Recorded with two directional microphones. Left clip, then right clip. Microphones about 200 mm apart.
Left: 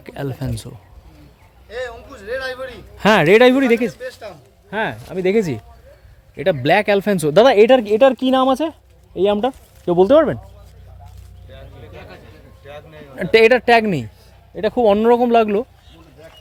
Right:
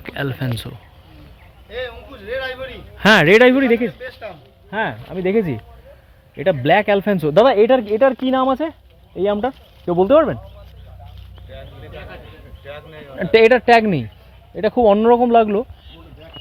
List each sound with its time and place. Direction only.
0.0 s speech: 5° left (ahead or behind)
1.7 s a sound: 40° left (ahead or behind)
3.0 s speech: 10° left (ahead or behind)
4.0 s speech: 40° left (ahead or behind)
4.7 s speech: 20° left (ahead or behind)
11.5 s a sound: 70° left (ahead or behind)
13.1 s a man's voice: 10° left (ahead or behind)